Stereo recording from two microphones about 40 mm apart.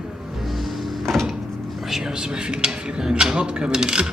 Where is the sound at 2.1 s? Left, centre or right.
Centre.